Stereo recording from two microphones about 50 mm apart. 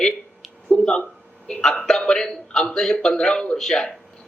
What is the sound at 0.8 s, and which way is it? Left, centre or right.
A man's voice, centre.